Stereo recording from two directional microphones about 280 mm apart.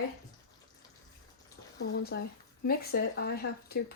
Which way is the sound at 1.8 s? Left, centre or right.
Left.